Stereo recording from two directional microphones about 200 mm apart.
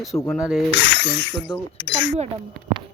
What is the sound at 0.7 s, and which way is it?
Speech, 60° left (ahead or behind).